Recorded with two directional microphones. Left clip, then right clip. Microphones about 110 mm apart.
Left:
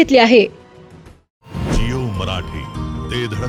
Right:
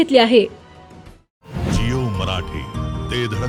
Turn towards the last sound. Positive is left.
turn(degrees=0)  # may be behind; listen again after turning